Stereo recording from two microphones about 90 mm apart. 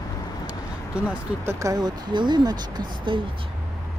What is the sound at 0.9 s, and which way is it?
Speech, 10° right (ahead or behind).